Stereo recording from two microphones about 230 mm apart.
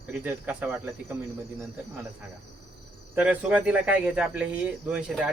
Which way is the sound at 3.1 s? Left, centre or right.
Centre.